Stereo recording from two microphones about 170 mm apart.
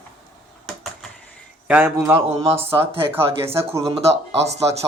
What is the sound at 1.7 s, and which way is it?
Speech, 10° right (ahead or behind).